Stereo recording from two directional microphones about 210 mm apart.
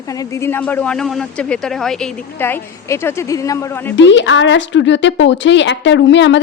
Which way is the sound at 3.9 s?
60° left (ahead or behind).